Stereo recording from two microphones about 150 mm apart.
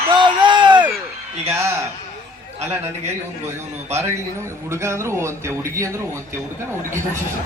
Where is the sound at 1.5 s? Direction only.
15° right (ahead or behind).